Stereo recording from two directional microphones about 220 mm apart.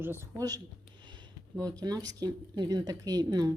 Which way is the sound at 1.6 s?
15° right (ahead or behind).